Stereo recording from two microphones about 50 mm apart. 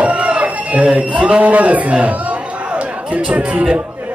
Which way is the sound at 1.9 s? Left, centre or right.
Right.